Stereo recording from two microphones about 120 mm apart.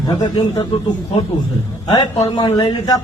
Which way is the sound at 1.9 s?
35° left (ahead or behind).